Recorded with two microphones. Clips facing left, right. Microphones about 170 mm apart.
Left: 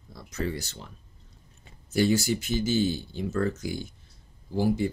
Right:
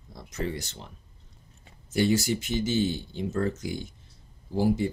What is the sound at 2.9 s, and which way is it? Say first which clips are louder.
Speech: left 1 dB; 25° right (ahead or behind).